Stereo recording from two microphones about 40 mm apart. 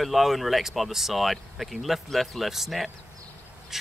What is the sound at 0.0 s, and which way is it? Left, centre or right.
Speech, centre.